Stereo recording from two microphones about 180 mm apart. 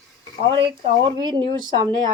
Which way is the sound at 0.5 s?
25° right (ahead or behind).